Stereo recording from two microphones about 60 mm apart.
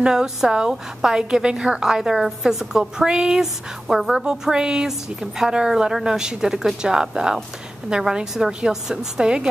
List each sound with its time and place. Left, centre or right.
0.0 s a woman's voice: centre